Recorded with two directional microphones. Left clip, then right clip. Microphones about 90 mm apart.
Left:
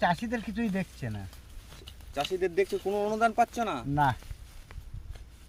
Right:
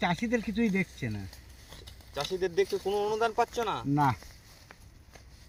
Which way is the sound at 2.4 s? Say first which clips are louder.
Right 1 dB; 90° left.